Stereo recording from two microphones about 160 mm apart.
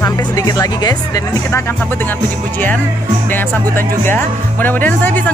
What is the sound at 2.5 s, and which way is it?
Speech, 10° left (ahead or behind).